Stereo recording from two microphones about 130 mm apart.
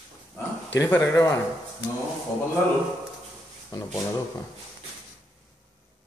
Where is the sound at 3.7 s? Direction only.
30° left (ahead or behind).